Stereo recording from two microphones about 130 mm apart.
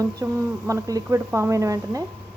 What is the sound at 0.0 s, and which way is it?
Speech, 25° right (ahead or behind).